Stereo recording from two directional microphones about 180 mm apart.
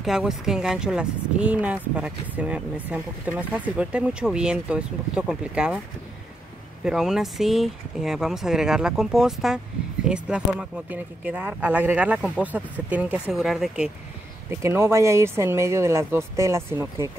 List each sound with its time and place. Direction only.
0.0 s speech: 5° right (ahead or behind)
6.8 s speech: 5° right (ahead or behind)
14.5 s speech: 15° right (ahead or behind)